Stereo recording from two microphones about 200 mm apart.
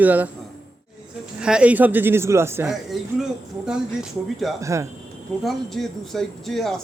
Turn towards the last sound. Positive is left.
turn(degrees=0)  # may be behind; listen again after turning